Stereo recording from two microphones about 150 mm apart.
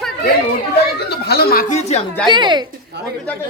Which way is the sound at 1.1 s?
90° left.